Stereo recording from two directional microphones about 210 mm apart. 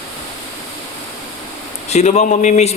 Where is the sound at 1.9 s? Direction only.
30° left (ahead or behind).